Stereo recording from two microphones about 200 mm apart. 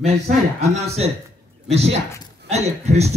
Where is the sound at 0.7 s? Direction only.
30° right (ahead or behind).